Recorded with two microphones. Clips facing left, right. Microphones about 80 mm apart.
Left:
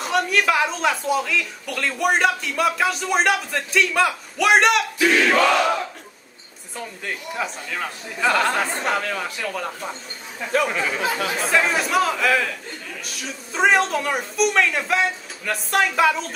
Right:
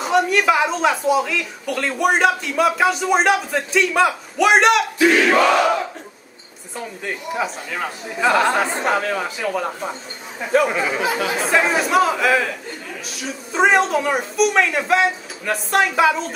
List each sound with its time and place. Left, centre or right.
0.0 s speech: centre
4.9 s crowd: right
5.2 s speech: centre